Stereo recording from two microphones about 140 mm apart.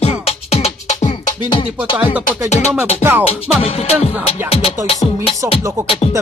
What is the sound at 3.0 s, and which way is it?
Music, 15° right (ahead or behind).